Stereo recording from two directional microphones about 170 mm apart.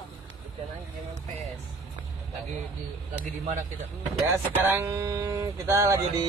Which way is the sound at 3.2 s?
50° right (ahead or behind).